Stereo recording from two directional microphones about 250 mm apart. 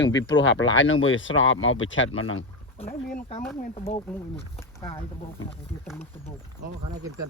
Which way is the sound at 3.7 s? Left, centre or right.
Left.